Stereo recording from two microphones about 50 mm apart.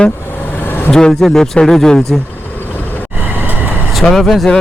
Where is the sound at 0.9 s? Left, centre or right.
Centre.